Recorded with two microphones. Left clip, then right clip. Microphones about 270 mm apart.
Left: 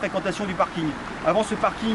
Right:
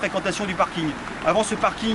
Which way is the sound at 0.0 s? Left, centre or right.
Centre.